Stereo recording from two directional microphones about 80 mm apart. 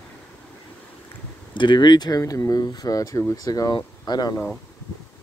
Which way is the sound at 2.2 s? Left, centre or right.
Left.